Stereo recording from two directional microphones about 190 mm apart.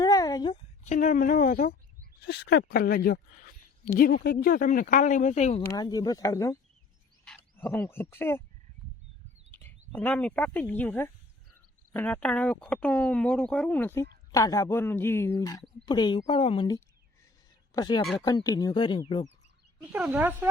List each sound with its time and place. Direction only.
0.0 s a sound: 20° left (ahead or behind)
0.9 s speech: 40° left (ahead or behind)
2.2 s speech: 60° left (ahead or behind); by 5.6 s 35° left (ahead or behind)
5.6 s speech: 20° left (ahead or behind)
9.5 s bird: 10° left (ahead or behind)
9.9 s speech: 10° left (ahead or behind); by 19.3 s 25° left (ahead or behind)
19.8 s speech: 5° right (ahead or behind)